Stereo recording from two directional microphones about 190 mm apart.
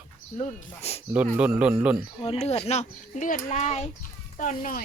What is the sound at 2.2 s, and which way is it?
Speech, 30° left (ahead or behind).